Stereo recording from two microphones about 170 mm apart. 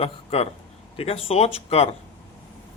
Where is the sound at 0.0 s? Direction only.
35° left (ahead or behind).